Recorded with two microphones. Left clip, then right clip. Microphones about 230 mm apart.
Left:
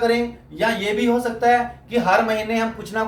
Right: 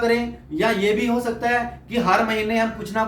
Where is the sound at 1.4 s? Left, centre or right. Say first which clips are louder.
Left 8 dB; centre.